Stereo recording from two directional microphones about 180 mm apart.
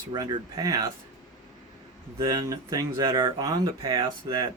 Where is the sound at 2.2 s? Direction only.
20° right (ahead or behind).